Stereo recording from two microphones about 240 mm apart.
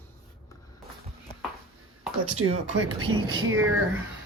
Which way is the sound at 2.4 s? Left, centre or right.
Right.